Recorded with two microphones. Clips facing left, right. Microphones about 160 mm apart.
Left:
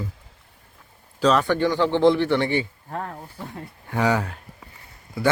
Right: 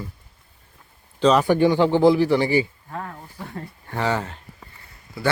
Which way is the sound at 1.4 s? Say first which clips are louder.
Right 4 dB; 15° right (ahead or behind).